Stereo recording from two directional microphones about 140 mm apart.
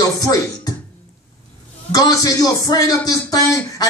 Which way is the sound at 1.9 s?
25° left (ahead or behind).